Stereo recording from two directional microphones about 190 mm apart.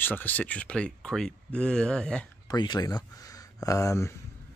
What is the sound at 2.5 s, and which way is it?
Speech, 20° left (ahead or behind).